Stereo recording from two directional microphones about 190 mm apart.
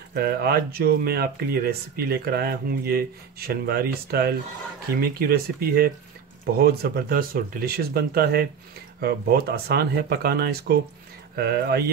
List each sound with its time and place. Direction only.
0.1 s speech: 55° right (ahead or behind)